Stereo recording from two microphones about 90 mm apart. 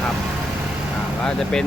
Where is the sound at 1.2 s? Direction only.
5° left (ahead or behind).